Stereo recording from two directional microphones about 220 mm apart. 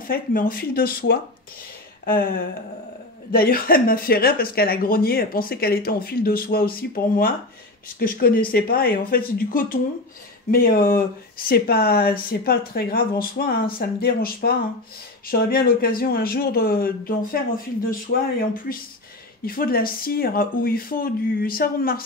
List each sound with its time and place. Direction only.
0.0 s speech: 40° left (ahead or behind)
3.3 s speech: 40° left (ahead or behind)